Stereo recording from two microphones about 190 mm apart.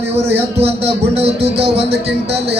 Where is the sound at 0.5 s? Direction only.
30° right (ahead or behind).